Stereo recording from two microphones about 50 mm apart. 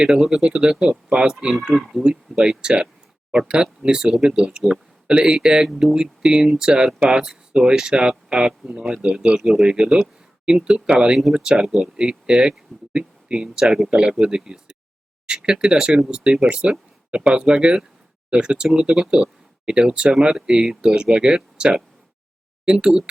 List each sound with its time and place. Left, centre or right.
0.2 s speech: centre
1.7 s speech: centre
2.0 s speech: centre